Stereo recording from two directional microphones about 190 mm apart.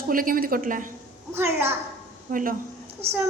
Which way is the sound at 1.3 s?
10° right (ahead or behind).